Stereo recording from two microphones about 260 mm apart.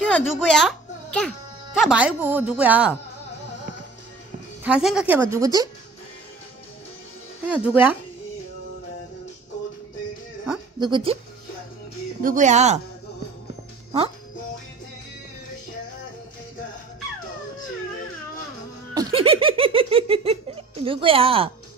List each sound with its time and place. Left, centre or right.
0.0 s a child's voice: centre
4.6 s a woman's voice: centre
7.4 s a woman's voice: centre
10.8 s speech: centre
12.2 s speech: right
18.9 s giggle: centre